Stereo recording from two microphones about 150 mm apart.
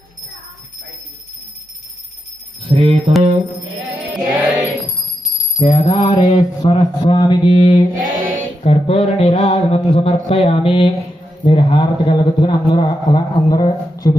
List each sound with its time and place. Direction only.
2.6 s music: 40° right (ahead or behind)
3.9 s music: 10° right (ahead or behind)
5.5 s a man's voice: 40° left (ahead or behind)
7.9 s music: 65° right (ahead or behind)
8.6 s a man's voice: 40° left (ahead or behind); by 14.2 s 25° left (ahead or behind)